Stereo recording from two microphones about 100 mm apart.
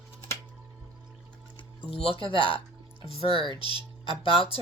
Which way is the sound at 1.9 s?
70° left (ahead or behind).